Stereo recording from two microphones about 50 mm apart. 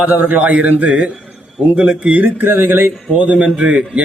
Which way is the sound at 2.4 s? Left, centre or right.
Right.